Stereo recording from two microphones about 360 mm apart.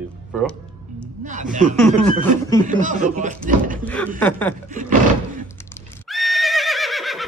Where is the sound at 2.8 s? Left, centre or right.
Right.